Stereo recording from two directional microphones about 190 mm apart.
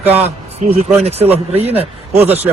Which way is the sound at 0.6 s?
30° right (ahead or behind).